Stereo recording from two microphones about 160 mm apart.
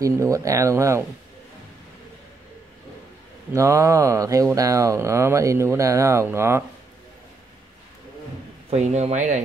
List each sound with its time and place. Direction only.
0.0 s speech: 20° right (ahead or behind)
3.5 s speech: 20° right (ahead or behind)
8.6 s speech: 45° right (ahead or behind)